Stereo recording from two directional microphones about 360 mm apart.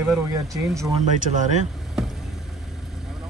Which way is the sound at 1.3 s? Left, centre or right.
Centre.